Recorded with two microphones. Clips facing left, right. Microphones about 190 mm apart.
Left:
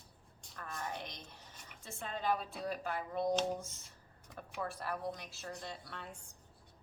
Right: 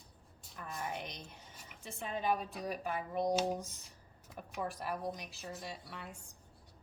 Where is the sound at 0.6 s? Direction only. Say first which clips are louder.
Right 1 dB; 20° right (ahead or behind).